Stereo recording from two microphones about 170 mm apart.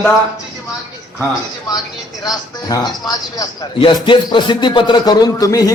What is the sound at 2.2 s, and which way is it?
Speech, 20° left (ahead or behind).